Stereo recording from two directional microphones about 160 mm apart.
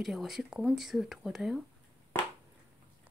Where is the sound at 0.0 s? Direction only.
Centre (ahead or behind).